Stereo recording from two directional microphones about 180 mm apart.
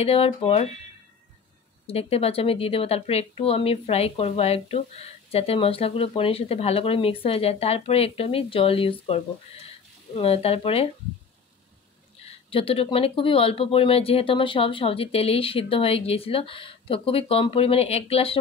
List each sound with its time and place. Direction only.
0.0 s a woman's voice: 35° left (ahead or behind)
1.9 s a woman's voice: 35° left (ahead or behind)
12.3 s a woman's voice: 30° left (ahead or behind)